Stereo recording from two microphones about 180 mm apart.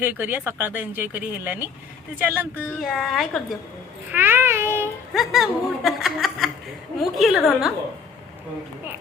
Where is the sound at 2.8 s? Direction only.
Centre (ahead or behind).